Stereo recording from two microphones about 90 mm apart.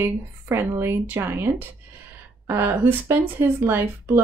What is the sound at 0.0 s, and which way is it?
Speech, 25° right (ahead or behind).